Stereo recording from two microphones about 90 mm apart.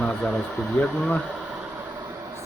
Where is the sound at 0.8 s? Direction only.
15° left (ahead or behind).